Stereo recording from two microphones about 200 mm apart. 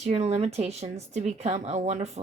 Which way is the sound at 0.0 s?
35° right (ahead or behind).